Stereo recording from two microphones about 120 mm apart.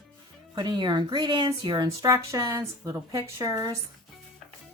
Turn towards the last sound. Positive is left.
turn(degrees=-30)  # may be behind; listen again after turning